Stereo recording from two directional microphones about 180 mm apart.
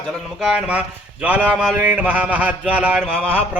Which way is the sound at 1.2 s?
5° right (ahead or behind).